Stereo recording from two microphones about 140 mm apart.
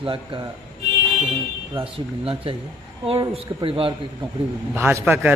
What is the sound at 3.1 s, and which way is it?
Speech, 40° right (ahead or behind).